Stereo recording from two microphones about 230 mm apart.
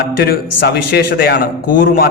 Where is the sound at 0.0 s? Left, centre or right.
Left.